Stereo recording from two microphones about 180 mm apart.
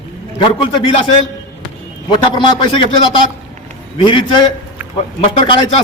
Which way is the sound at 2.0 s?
25° left (ahead or behind).